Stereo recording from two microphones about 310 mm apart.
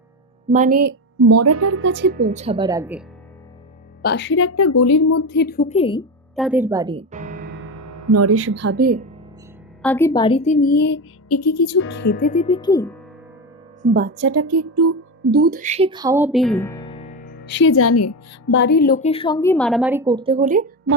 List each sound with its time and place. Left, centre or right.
0.5 s a woman's voice: right
0.9 s speech: right; by 3.0 s centre
4.0 s speech: left
5.2 s a woman's voice: left; by 6.1 s centre
6.3 s speech: centre; by 7.6 s right
7.6 s speech: right
9.8 s a woman's voice: centre; by 11.0 s left
11.3 s speech: left
11.9 s a woman's voice: left; by 13.0 s centre
13.8 s a woman's voice: right
14.2 s speech: right
14.4 s speech: right
15.3 s speech: right; by 18.5 s left
18.5 s a woman's voice: left; by 20.7 s right